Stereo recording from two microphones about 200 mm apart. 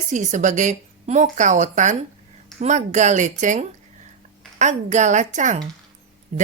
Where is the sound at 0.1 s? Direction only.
40° right (ahead or behind).